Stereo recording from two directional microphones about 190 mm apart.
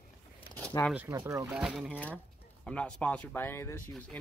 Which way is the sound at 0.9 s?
15° right (ahead or behind).